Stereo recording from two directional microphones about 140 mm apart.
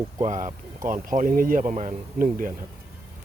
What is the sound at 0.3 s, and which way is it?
Speech, 65° right (ahead or behind).